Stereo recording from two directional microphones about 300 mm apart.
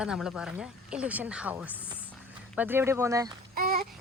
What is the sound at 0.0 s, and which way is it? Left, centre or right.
A woman's voice, centre.